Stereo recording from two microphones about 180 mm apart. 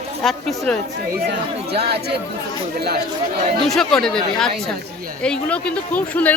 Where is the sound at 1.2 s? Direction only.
65° right (ahead or behind).